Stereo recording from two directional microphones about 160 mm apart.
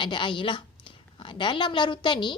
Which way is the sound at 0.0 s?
30° left (ahead or behind).